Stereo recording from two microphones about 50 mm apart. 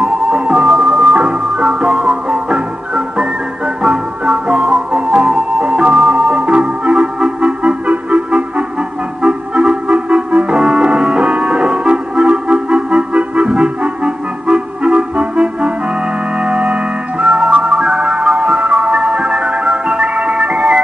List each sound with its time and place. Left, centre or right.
0.0 s music: right
0.7 s music: centre; by 20.8 s right